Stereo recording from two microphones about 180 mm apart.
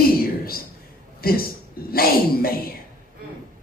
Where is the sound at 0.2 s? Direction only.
55° left (ahead or behind).